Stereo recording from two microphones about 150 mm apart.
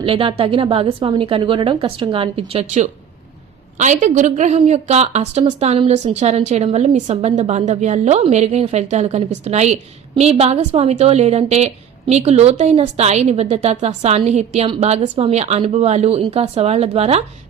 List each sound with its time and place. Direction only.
0.0 s a woman's voice: 35° right (ahead or behind)